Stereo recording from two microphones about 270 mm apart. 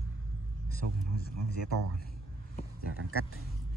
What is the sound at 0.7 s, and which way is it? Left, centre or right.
Speech, left.